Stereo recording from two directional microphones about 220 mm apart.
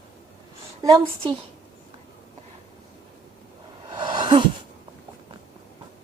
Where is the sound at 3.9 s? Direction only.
20° right (ahead or behind).